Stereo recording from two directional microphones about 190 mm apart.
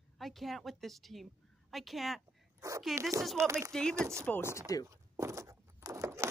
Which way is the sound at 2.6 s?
15° right (ahead or behind).